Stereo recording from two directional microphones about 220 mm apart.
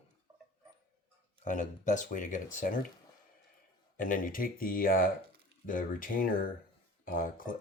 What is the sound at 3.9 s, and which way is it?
Speech, 40° left (ahead or behind).